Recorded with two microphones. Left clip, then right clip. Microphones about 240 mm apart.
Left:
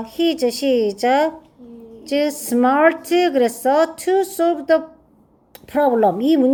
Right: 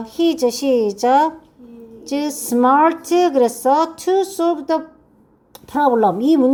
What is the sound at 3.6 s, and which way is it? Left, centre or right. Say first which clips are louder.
Speech: right 1 dB; right.